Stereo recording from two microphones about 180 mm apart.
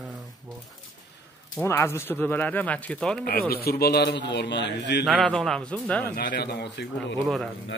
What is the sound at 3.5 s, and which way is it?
Speech, 60° left (ahead or behind).